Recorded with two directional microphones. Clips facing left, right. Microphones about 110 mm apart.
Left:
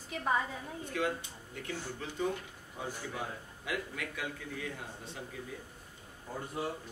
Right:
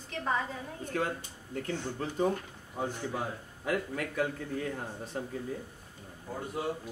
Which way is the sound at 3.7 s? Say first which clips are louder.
Right 6 dB; 45° right (ahead or behind).